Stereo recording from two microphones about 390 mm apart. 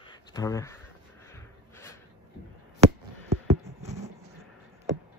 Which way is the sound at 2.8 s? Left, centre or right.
Centre.